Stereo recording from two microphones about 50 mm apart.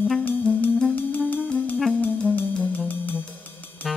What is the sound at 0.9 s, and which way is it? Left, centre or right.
Music, left.